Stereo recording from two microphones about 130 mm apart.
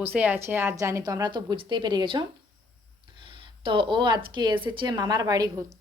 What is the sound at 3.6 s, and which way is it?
Speech, 40° right (ahead or behind).